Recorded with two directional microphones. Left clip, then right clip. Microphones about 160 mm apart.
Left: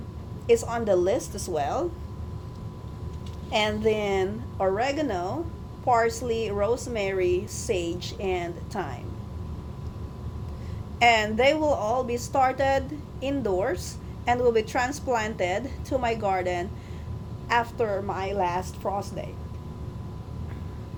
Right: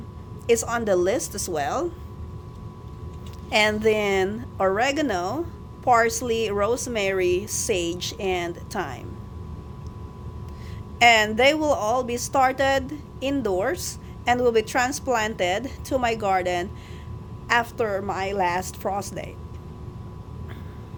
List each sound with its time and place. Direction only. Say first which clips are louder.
0.4 s speech: right 1 dB; 45° right (ahead or behind)
3.5 s a woman's voice: right 4 dB; 40° right (ahead or behind)
11.0 s a woman's voice: right 3 dB; 40° right (ahead or behind)